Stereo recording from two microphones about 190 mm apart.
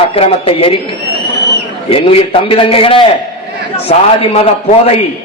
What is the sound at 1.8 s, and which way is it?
A man's voice, 30° left (ahead or behind).